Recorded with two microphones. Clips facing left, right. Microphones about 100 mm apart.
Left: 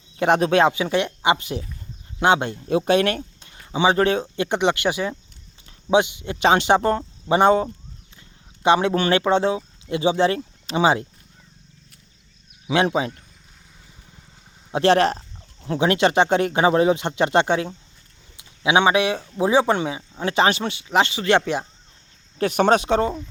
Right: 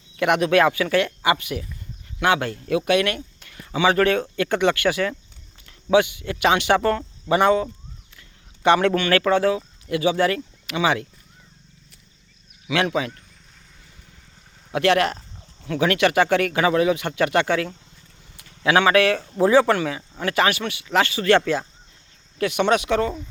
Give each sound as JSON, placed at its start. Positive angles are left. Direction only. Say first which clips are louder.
{"t": 0.2, "sound": "speech", "louder": "left 1 dB", "side_deg": 35}
{"t": 8.6, "sound": "speech", "louder": "even", "side_deg": 20}
{"t": 12.6, "sound": "speech", "louder": "left 2 dB", "side_deg": 30}
{"t": 14.7, "sound": "speech", "louder": "left 2 dB", "side_deg": 30}
{"t": 22.4, "sound": "speech", "louder": "left 2 dB", "side_deg": 40}